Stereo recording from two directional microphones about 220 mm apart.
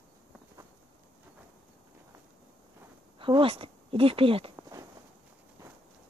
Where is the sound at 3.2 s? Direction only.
25° right (ahead or behind).